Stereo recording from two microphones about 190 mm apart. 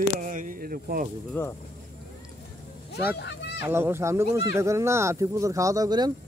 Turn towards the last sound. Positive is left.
turn(degrees=-20)  # may be behind; listen again after turning